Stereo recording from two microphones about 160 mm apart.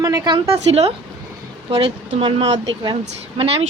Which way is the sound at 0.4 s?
40° right (ahead or behind).